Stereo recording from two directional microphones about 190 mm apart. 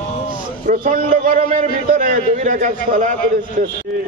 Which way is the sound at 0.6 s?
45° right (ahead or behind).